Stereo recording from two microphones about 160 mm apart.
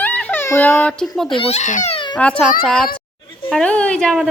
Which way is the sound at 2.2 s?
10° left (ahead or behind).